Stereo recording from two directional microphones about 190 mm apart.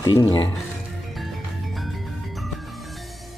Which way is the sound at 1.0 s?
Centre (ahead or behind).